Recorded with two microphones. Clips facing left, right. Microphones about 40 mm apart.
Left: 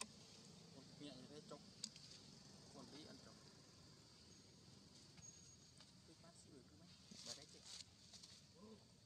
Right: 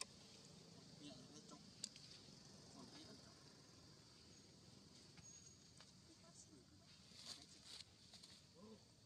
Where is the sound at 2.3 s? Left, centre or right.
Centre.